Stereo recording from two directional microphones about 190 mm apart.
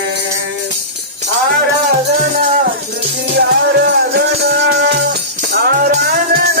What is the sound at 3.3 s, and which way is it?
Music, 60° right (ahead or behind).